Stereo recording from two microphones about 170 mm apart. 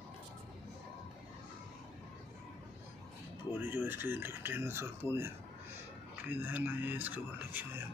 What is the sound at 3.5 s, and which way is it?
Speech, 10° right (ahead or behind).